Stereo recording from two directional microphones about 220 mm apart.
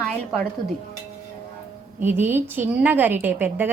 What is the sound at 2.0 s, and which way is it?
A woman's voice, 10° right (ahead or behind).